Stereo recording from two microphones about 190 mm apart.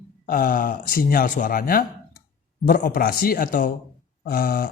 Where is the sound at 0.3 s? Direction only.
50° left (ahead or behind).